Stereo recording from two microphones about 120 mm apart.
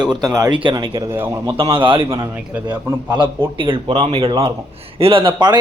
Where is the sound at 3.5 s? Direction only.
45° right (ahead or behind).